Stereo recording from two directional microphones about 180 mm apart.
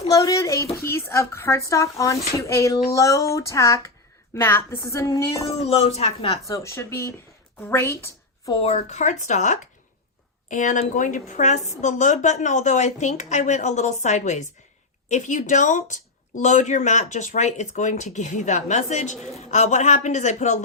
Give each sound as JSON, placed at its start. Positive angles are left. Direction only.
{"t": 0.1, "sound": "speech", "side_deg": 20}
{"t": 5.5, "sound": "speech", "side_deg": 35}
{"t": 6.5, "sound": "a woman's voice", "side_deg": 15}
{"t": 8.5, "sound": "a woman's voice", "side_deg": 35}